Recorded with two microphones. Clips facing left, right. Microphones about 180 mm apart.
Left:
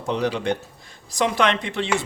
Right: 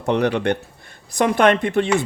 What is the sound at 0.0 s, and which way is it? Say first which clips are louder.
Speech: right 5 dB; 60° right (ahead or behind).